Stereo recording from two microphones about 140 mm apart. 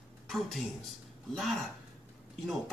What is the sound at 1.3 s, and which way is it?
Speech, centre (ahead or behind).